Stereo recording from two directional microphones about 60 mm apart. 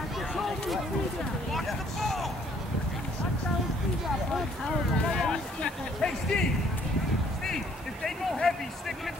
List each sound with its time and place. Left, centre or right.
1.5 s vehicle: centre
5.0 s music: centre
7.4 s a sound: centre